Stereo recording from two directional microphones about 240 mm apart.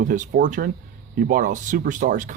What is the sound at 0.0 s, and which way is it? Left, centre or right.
Speech, right.